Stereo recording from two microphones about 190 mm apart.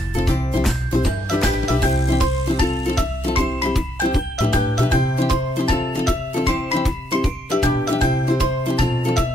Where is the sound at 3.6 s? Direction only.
Centre (ahead or behind).